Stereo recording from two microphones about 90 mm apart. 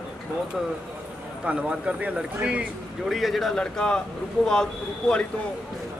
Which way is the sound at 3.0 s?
Centre (ahead or behind).